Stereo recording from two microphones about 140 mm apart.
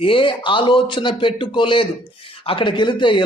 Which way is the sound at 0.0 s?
40° left (ahead or behind).